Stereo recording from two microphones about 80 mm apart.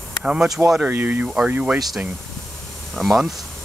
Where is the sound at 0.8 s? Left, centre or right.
Right.